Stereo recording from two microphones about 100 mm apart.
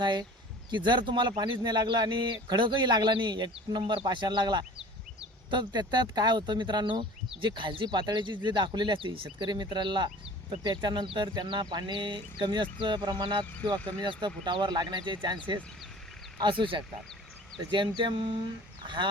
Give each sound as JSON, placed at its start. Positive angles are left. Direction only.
{"t": 0.0, "sound": "speech", "side_deg": -45}